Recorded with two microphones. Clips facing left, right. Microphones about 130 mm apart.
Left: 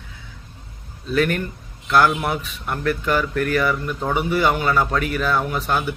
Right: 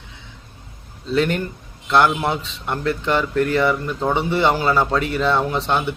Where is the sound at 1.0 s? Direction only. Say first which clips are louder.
Right 1 dB; 25° right (ahead or behind).